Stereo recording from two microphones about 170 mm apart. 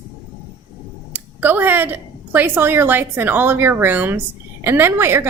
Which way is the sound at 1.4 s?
10° right (ahead or behind).